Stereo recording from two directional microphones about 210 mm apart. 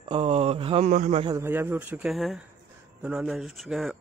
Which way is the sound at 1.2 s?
10° right (ahead or behind).